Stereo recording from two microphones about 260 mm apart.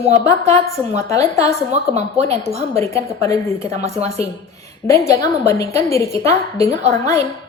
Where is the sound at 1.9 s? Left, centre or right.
Right.